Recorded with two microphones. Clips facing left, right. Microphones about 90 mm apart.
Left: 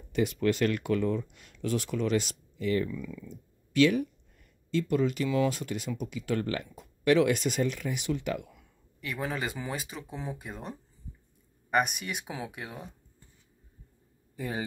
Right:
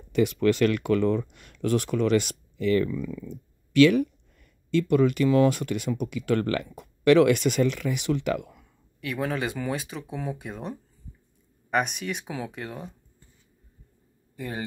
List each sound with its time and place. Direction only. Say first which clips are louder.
0.1 s speech: right 5 dB; 80° right
3.0 s speech: right 7 dB; 45° right (ahead or behind)
3.3 s speech: right 6 dB; 75° right (ahead or behind)
9.0 s speech: right 5 dB; centre (ahead or behind)
14.3 s a sound: right 1 dB; 20° left (ahead or behind)